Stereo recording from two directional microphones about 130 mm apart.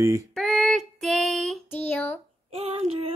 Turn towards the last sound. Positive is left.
turn(degrees=-50)  # may be behind; listen again after turning